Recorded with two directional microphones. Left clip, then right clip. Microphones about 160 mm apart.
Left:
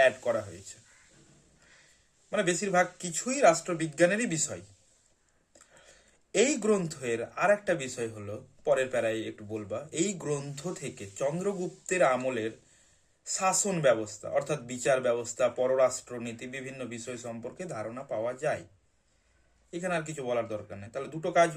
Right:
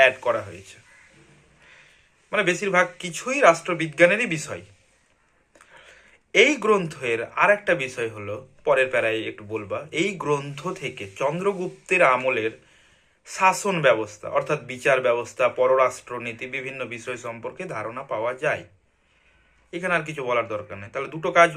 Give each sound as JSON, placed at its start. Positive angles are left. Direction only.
{"t": 0.0, "sound": "a man's voice", "side_deg": 15}
{"t": 2.3, "sound": "speech", "side_deg": 20}
{"t": 5.8, "sound": "a man's voice", "side_deg": 15}
{"t": 20.0, "sound": "a man's voice", "side_deg": 20}